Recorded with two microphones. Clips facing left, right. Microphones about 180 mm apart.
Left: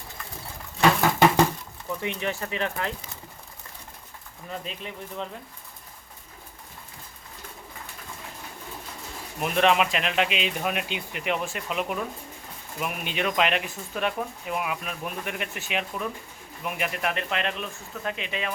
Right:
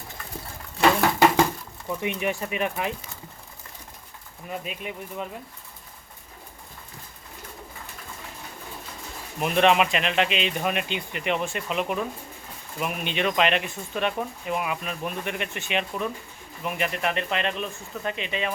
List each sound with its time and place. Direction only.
1.9 s speech: 15° right (ahead or behind)
4.4 s speech: 10° right (ahead or behind)
9.4 s speech: centre (ahead or behind)